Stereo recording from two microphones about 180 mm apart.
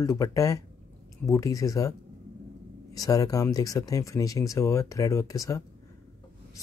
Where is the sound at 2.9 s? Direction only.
20° left (ahead or behind).